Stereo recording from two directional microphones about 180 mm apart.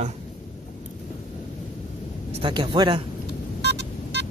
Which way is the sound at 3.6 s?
70° right (ahead or behind).